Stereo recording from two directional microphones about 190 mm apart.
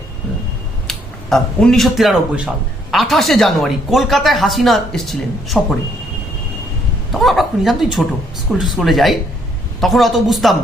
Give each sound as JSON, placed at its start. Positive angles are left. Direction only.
{"t": 0.9, "sound": "speech", "side_deg": 0}
{"t": 7.1, "sound": "a woman's voice", "side_deg": 0}